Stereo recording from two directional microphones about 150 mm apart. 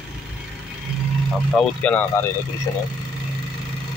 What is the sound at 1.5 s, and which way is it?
Speech, 5° left (ahead or behind).